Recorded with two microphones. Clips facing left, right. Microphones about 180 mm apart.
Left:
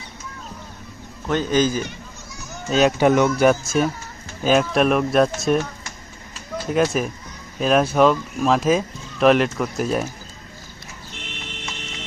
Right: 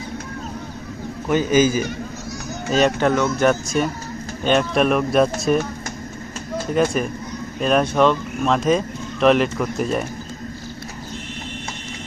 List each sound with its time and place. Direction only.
1.3 s a man's voice: 10° right (ahead or behind)
3.0 s speech: 15° left (ahead or behind)
7.0 s speech: centre (ahead or behind)
11.2 s music: 85° left